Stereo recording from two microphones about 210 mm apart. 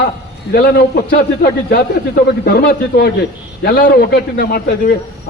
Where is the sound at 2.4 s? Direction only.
50° left (ahead or behind).